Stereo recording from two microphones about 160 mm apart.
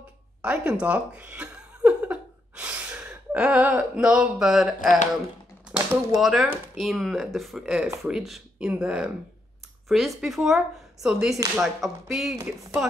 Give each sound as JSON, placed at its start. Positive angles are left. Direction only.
{"t": 0.4, "sound": "speech", "side_deg": -5}
{"t": 4.7, "sound": "speech", "side_deg": 55}
{"t": 5.7, "sound": "speech", "side_deg": -5}